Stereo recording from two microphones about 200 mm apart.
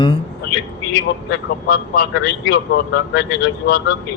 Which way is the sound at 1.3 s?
55° left (ahead or behind).